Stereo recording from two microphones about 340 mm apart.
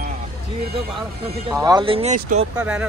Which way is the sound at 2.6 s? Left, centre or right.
Centre.